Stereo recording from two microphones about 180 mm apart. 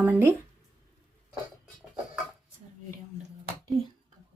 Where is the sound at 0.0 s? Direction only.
10° right (ahead or behind).